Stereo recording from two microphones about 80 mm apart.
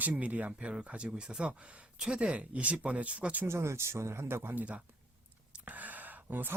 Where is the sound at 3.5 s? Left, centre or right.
Right.